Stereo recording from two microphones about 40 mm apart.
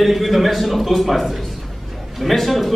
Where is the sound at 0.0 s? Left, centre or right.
Centre.